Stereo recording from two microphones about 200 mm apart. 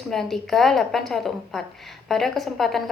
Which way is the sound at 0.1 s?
Centre (ahead or behind).